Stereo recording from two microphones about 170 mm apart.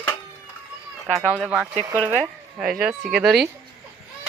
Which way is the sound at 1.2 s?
10° right (ahead or behind).